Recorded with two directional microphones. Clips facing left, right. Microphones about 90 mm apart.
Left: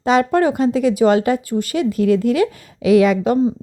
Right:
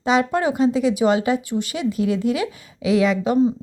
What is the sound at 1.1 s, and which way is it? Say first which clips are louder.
A woman's voice: left 3 dB; 50° left (ahead or behind).